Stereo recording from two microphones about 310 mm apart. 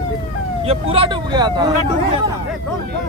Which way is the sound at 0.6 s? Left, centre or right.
Centre.